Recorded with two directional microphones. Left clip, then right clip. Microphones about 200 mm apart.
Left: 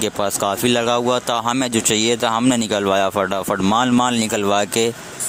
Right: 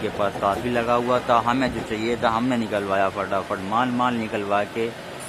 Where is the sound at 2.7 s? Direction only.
60° left (ahead or behind).